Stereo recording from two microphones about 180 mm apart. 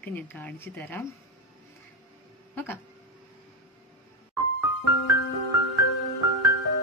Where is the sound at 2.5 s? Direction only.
10° left (ahead or behind).